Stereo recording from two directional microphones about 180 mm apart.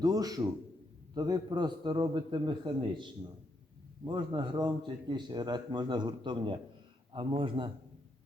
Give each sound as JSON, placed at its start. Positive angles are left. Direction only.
{"t": 0.0, "sound": "speech", "side_deg": -20}